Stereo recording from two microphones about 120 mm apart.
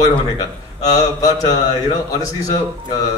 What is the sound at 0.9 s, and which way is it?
A man's voice, 30° left (ahead or behind).